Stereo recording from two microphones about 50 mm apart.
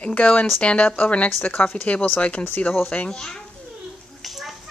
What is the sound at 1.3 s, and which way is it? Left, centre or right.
Speech, left.